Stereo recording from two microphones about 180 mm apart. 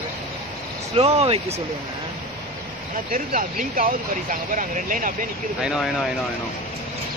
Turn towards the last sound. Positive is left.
turn(degrees=-5)  # may be behind; listen again after turning